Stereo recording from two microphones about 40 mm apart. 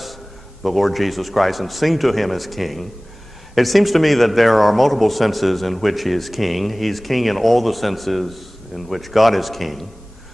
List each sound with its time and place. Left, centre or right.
0.0 s a man's voice: centre